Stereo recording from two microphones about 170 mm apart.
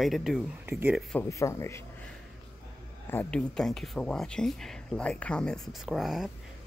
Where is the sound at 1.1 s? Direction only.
15° left (ahead or behind).